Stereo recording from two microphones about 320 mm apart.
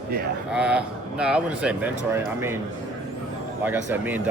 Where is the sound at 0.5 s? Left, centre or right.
Centre.